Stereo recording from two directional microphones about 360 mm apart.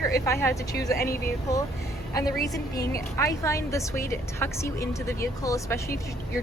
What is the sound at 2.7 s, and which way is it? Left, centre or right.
Speech, left.